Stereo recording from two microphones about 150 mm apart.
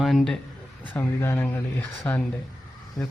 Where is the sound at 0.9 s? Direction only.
15° left (ahead or behind).